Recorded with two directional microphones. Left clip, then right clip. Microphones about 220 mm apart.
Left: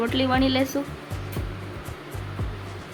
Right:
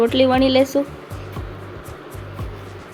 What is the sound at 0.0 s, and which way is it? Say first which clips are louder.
Speech: right 8 dB; 15° right (ahead or behind).